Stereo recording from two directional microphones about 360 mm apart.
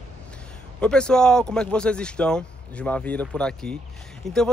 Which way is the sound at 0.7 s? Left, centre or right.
Centre.